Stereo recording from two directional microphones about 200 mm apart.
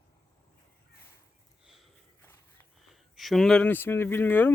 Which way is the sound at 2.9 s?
Centre (ahead or behind).